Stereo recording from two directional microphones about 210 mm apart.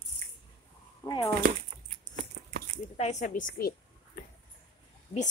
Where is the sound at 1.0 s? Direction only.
20° left (ahead or behind).